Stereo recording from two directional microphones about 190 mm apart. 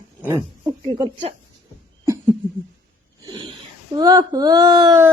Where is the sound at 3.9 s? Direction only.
20° right (ahead or behind).